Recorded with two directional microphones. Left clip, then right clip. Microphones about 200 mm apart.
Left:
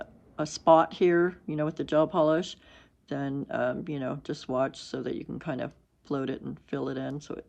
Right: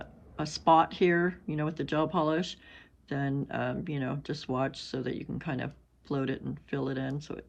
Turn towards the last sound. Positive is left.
turn(degrees=10)  # may be behind; listen again after turning